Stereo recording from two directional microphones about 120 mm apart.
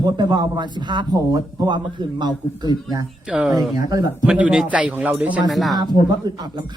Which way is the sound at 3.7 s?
30° right (ahead or behind).